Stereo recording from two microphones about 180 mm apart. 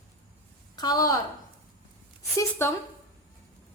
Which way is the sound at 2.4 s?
15° left (ahead or behind).